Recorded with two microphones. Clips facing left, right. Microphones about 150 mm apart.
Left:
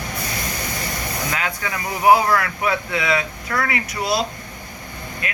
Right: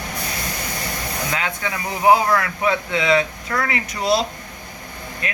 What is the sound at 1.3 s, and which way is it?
Speech, 25° right (ahead or behind).